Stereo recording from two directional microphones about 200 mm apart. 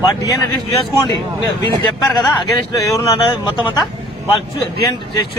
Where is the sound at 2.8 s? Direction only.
15° left (ahead or behind).